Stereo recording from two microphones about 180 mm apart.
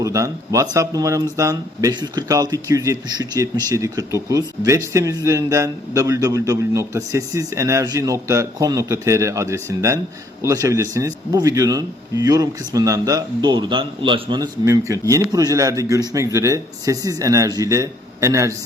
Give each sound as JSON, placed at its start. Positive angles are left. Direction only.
{"t": 0.0, "sound": "a man's voice", "side_deg": -20}